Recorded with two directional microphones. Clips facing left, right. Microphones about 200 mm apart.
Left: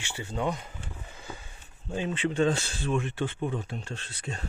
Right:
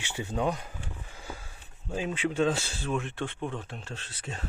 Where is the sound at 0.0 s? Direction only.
20° right (ahead or behind).